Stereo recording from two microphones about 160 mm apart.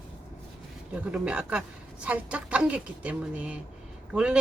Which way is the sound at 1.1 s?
5° right (ahead or behind).